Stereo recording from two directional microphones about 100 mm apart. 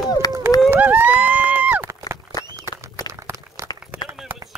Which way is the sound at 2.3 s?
40° left (ahead or behind).